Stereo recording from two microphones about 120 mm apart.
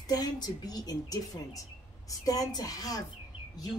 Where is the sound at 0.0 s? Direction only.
35° left (ahead or behind).